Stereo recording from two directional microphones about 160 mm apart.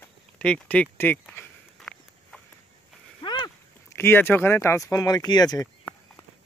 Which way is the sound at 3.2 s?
30° left (ahead or behind).